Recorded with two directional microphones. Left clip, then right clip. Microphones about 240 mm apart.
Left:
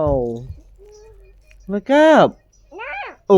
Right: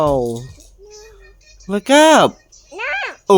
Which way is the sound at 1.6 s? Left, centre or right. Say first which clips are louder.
Right 2 dB; right.